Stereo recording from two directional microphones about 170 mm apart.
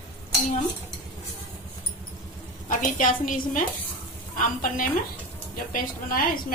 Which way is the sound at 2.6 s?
50° left (ahead or behind).